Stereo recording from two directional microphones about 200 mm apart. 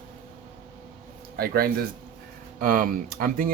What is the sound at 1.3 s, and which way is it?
Speech, 50° right (ahead or behind).